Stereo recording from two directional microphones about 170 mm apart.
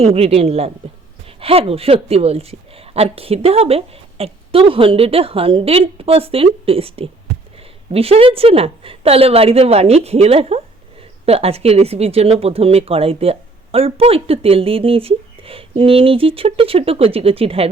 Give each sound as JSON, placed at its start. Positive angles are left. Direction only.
{"t": 0.0, "sound": "speech", "side_deg": -35}